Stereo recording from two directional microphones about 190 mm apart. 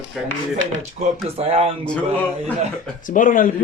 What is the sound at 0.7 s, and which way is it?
Speech, 35° right (ahead or behind).